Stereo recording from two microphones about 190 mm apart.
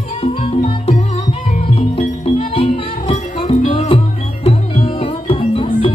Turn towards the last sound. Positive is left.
turn(degrees=30)  # may be behind; listen again after turning